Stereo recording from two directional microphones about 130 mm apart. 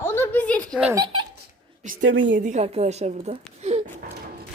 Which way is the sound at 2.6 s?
55° right (ahead or behind).